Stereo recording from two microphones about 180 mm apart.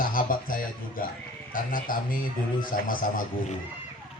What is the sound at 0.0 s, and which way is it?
A man's voice, 50° left (ahead or behind).